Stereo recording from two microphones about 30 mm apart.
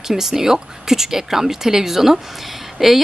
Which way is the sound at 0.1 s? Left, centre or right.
Centre.